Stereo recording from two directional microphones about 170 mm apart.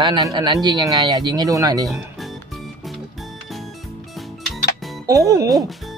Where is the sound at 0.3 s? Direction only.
25° right (ahead or behind).